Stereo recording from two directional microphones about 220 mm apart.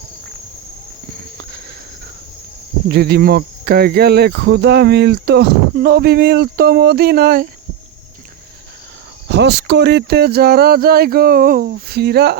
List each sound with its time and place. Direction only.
2.9 s speech: 45° right (ahead or behind)
9.3 s speech: 50° right (ahead or behind)